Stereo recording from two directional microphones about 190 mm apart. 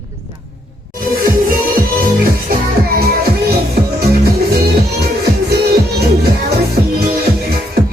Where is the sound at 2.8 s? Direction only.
55° right (ahead or behind).